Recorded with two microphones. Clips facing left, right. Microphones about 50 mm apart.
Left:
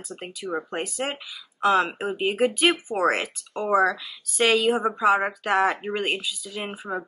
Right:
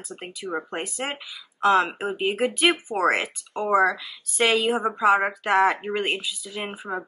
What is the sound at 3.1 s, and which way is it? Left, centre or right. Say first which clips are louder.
Speech: right 1 dB; centre.